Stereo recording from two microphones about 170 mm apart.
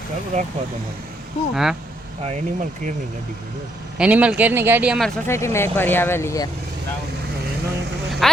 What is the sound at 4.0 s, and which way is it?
Speech, 5° right (ahead or behind).